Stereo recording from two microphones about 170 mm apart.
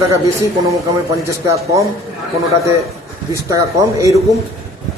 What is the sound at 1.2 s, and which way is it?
Speech, 15° right (ahead or behind).